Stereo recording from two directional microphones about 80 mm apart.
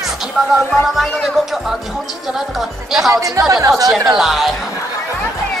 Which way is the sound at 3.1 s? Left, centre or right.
Right.